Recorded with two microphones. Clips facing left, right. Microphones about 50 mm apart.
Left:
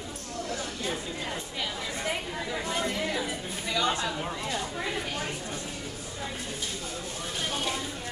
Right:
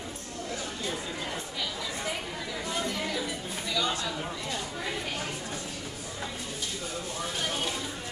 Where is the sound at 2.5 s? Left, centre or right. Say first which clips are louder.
Left 2 dB; left.